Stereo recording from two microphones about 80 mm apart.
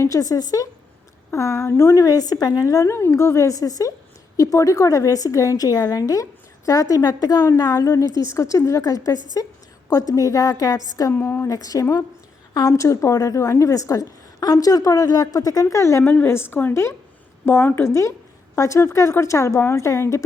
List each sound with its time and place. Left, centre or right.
0.0 s a woman's voice: left
2.0 s a woman's voice: left
11.1 s a woman's voice: left
11.4 s a woman's voice: left
16.0 s a woman's voice: left